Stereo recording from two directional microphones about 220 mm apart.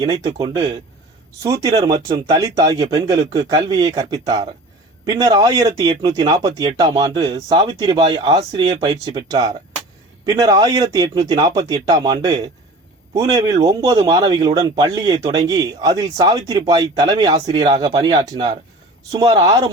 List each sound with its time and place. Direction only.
0.0 s speech: 20° right (ahead or behind)